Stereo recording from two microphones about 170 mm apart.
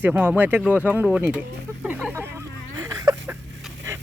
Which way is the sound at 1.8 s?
5° right (ahead or behind).